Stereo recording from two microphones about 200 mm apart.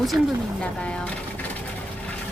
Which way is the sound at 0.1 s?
10° right (ahead or behind).